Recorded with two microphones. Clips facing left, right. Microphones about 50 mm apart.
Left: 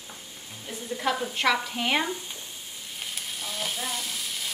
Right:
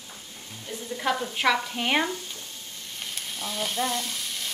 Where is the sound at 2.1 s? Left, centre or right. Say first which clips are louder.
Even; centre.